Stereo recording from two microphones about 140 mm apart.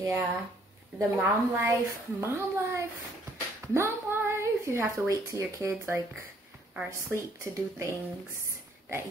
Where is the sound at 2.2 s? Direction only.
20° right (ahead or behind).